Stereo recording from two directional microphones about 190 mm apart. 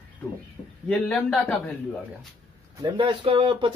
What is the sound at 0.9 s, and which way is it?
Speech, 5° left (ahead or behind).